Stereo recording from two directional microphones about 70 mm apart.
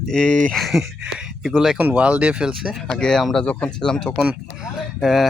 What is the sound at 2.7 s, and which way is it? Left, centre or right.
Speech, centre.